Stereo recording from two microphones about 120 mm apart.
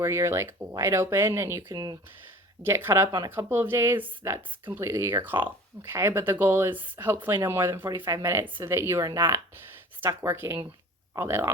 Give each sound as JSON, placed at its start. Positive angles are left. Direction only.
{"t": 0.0, "sound": "speech", "side_deg": -25}
{"t": 1.6, "sound": "speech", "side_deg": -35}
{"t": 2.6, "sound": "speech", "side_deg": -20}